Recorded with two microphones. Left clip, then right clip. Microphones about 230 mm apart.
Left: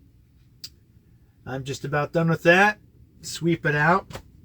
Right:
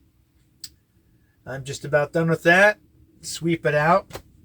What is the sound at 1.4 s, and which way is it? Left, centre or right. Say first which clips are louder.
Speech: right 2 dB; centre.